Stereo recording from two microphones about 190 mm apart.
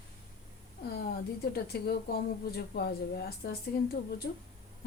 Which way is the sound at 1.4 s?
55° left (ahead or behind).